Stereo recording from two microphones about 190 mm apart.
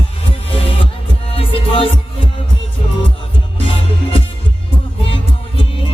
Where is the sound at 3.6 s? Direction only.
30° left (ahead or behind).